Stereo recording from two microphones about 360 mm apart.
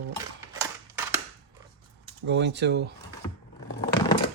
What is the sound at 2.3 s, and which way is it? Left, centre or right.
Speech, right.